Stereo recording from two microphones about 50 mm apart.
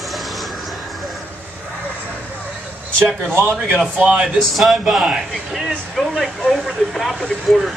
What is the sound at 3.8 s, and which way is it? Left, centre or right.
Speech, right.